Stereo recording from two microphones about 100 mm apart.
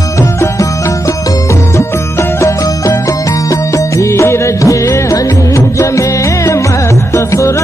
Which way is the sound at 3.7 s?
30° left (ahead or behind).